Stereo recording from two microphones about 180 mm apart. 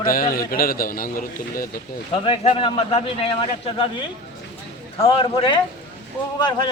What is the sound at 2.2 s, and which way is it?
A man's voice, 30° left (ahead or behind).